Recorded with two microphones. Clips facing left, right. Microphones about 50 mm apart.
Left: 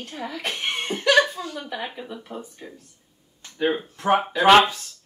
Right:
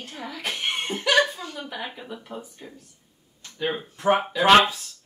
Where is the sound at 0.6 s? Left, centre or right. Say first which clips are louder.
Even; centre.